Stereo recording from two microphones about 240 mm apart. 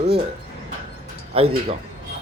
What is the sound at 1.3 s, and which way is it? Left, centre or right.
Speech, right.